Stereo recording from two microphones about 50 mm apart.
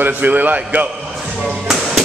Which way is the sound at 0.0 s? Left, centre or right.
Right.